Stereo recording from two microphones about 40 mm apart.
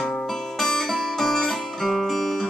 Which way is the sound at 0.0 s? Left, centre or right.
Centre.